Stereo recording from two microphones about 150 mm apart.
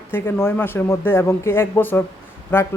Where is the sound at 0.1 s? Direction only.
15° left (ahead or behind).